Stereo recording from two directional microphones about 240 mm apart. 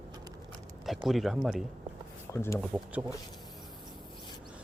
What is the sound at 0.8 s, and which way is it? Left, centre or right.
Speech, centre.